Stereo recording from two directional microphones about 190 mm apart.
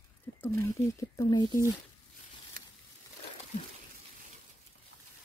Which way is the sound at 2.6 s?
50° right (ahead or behind).